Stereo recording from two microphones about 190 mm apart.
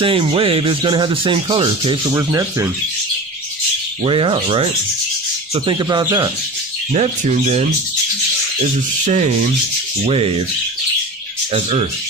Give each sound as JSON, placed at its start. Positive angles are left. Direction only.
{"t": 0.0, "sound": "speech", "side_deg": -30}
{"t": 2.1, "sound": "speech", "side_deg": -15}
{"t": 4.0, "sound": "speech", "side_deg": -30}
{"t": 6.9, "sound": "speech", "side_deg": -35}
{"t": 9.0, "sound": "speech", "side_deg": -40}